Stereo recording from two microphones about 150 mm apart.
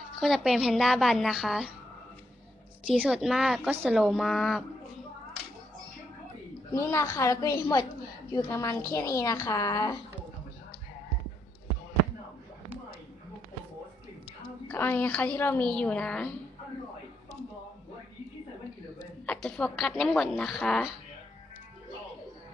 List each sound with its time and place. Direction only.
0.2 s a woman's voice: centre (ahead or behind)
2.8 s a woman's voice: 5° right (ahead or behind)
6.7 s a woman's voice: 20° left (ahead or behind)
14.7 s a woman's voice: 10° left (ahead or behind)
19.2 s a woman's voice: 5° left (ahead or behind)